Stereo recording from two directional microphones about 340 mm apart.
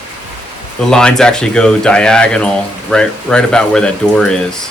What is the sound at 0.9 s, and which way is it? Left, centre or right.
Speech, centre.